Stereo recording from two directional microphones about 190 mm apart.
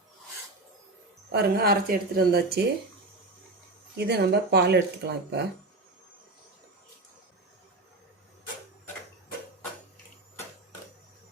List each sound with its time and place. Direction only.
1.3 s speech: 55° right (ahead or behind)
3.9 s speech: 60° right (ahead or behind)